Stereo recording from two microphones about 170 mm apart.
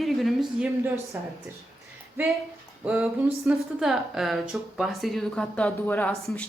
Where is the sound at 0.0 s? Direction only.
Centre (ahead or behind).